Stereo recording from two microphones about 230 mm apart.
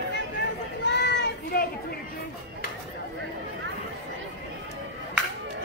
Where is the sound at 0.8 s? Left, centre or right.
Left.